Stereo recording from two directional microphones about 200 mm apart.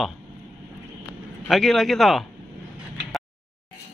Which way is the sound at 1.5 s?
Centre (ahead or behind).